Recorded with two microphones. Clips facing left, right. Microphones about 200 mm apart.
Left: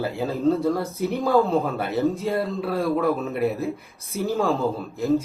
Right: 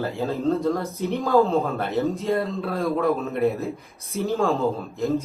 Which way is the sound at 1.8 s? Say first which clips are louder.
Left 1 dB; centre (ahead or behind).